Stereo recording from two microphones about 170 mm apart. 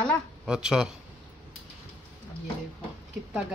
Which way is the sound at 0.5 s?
5° right (ahead or behind).